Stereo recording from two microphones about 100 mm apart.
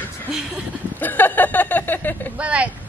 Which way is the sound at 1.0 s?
20° left (ahead or behind).